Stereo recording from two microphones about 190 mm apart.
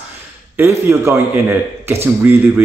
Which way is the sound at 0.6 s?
15° right (ahead or behind).